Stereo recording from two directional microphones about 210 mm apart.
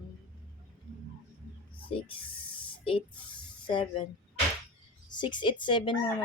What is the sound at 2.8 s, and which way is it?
Speech, 25° left (ahead or behind).